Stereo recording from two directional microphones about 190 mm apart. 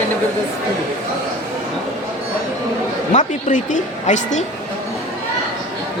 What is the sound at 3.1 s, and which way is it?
A woman's voice, 40° left (ahead or behind).